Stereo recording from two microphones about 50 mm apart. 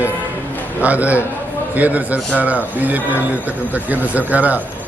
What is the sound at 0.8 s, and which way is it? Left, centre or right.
A man's voice, right.